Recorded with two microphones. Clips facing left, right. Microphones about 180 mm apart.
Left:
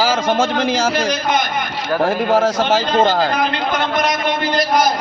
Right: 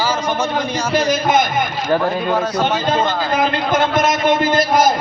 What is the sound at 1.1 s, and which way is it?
Speech, 50° right (ahead or behind).